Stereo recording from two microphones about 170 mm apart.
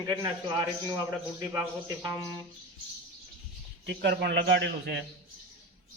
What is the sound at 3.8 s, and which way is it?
A man's voice, 85° right.